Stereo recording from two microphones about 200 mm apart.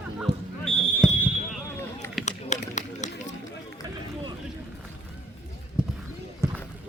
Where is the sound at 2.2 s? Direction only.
35° left (ahead or behind).